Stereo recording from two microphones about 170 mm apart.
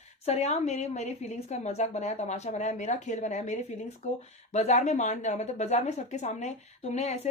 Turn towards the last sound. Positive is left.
turn(degrees=40)  # may be behind; listen again after turning